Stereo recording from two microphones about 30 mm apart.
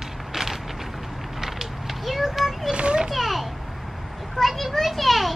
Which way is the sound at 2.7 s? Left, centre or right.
Right.